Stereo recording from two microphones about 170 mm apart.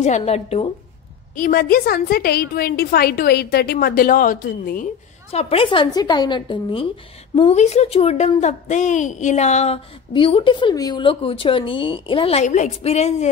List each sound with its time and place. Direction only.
0.0 s speech: 40° left (ahead or behind)
1.3 s a woman's voice: 55° left (ahead or behind)
5.3 s speech: 35° left (ahead or behind)